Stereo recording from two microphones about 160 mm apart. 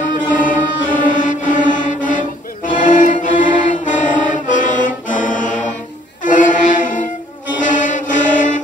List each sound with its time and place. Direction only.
0.3 s mantra: 55° left (ahead or behind)
6.2 s music: 55° left (ahead or behind)
7.6 s mantra: 55° left (ahead or behind)